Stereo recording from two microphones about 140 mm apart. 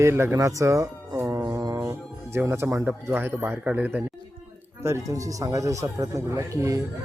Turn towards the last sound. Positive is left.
turn(degrees=-25)  # may be behind; listen again after turning